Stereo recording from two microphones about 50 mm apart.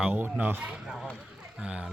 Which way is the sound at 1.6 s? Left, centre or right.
Centre.